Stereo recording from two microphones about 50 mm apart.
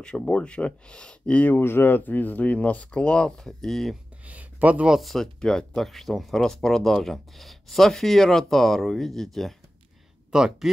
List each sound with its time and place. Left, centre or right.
0.0 s speech: centre
1.5 s speech: left; by 3.3 s centre
3.3 s speech: centre
4.3 s speech: right
5.0 s speech: centre
10.3 s speech: centre